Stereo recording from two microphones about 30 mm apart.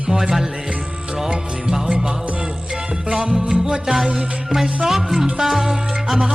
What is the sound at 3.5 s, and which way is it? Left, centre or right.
Music, right.